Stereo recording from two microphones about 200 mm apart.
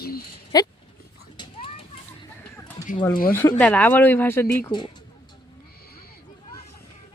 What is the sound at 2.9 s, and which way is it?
Speech, 20° left (ahead or behind).